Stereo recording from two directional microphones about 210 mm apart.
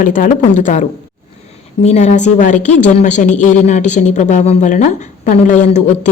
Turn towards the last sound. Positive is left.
turn(degrees=35)  # may be behind; listen again after turning